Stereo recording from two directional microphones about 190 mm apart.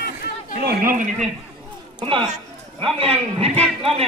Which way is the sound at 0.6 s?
55° right (ahead or behind).